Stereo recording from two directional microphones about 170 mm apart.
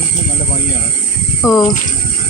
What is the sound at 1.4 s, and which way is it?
Speech, 20° left (ahead or behind).